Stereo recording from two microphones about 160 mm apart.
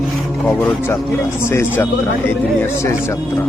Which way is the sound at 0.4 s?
10° left (ahead or behind).